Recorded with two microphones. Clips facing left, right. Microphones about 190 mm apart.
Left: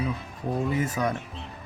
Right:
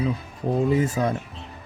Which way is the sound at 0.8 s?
30° right (ahead or behind).